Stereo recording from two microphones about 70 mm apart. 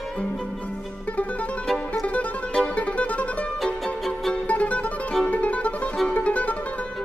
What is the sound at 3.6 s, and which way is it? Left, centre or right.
Music, centre.